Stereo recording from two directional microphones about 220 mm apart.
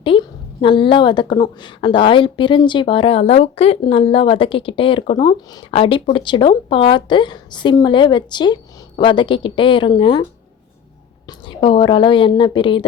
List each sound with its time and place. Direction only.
0.0 s a woman's voice: 25° left (ahead or behind)
11.3 s a woman's voice: 20° left (ahead or behind)